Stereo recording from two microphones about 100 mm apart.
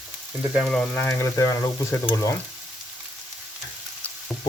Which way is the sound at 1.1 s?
30° left (ahead or behind).